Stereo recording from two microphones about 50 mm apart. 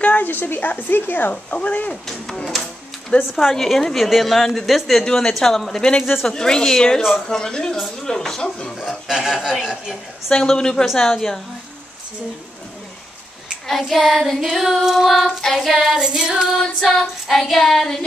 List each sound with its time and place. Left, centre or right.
0.0 s a woman's voice: left
1.3 s speech: left
2.0 s a woman's voice: centre
3.1 s a woman's voice: left
3.5 s child singing: centre
5.0 s a woman's voice: centre
8.7 s a woman's voice: centre
10.3 s a woman's voice: centre
13.7 s child singing: centre
16.0 s a woman's voice: centre
17.0 s child singing: centre